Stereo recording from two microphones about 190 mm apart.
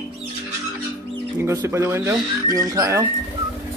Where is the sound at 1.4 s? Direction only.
15° right (ahead or behind).